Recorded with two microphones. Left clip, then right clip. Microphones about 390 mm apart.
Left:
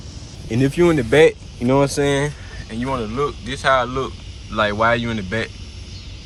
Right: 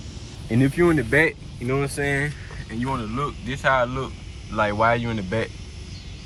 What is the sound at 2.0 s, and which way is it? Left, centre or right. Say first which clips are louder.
Speech: left 5 dB; left.